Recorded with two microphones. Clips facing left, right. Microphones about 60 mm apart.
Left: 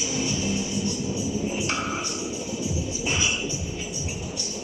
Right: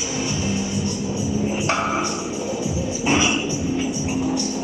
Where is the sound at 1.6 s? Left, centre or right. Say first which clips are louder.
Right 7 dB; right.